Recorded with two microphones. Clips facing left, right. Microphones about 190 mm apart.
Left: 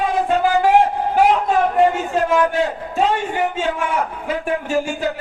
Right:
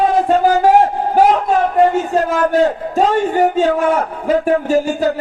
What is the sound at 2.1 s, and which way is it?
A man's voice, 40° right (ahead or behind).